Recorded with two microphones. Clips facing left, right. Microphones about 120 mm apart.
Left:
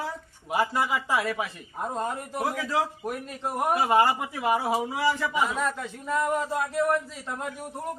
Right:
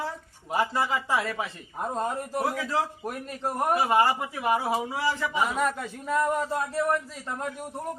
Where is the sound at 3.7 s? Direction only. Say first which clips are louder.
Left 1 dB; 20° left (ahead or behind).